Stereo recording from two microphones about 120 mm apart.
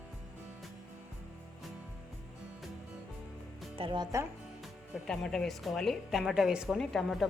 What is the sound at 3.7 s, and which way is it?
Speech, 45° right (ahead or behind).